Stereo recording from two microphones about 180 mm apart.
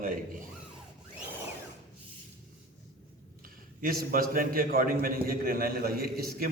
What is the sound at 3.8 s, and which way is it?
A man's voice, 55° right (ahead or behind).